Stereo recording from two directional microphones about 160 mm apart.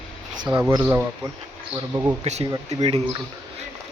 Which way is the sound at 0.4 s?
5° right (ahead or behind).